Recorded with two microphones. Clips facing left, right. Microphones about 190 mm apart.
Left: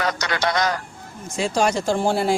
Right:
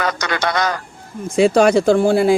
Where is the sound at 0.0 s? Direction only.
60° right (ahead or behind).